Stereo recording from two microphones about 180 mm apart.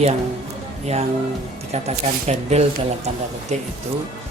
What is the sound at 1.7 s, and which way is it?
Speech, 35° right (ahead or behind).